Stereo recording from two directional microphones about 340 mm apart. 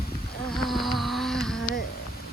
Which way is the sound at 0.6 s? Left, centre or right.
Centre.